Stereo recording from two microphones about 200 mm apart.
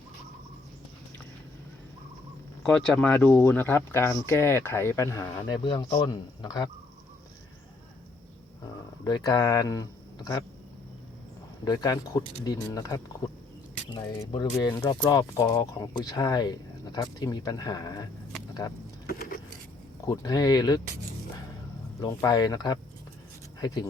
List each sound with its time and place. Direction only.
2.6 s speech: 5° left (ahead or behind); by 6.7 s 20° left (ahead or behind)
9.0 s speech: 20° left (ahead or behind)
11.6 s speech: 20° left (ahead or behind)
19.0 s keys jangling: 50° left (ahead or behind)
20.1 s speech: 20° left (ahead or behind)
22.0 s speech: 20° left (ahead or behind)